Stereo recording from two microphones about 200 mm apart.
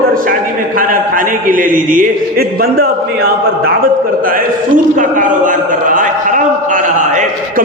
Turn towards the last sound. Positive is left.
turn(degrees=-40)  # may be behind; listen again after turning